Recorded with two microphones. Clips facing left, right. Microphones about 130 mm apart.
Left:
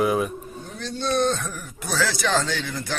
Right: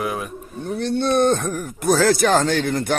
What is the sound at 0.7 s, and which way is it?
Speech, 60° right (ahead or behind).